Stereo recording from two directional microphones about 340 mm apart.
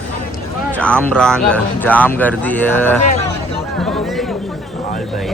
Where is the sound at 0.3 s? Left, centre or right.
Centre.